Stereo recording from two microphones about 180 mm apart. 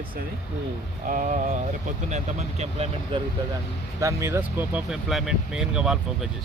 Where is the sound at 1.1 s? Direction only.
45° right (ahead or behind).